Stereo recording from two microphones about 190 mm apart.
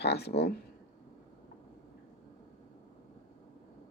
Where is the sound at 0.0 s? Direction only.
60° left (ahead or behind).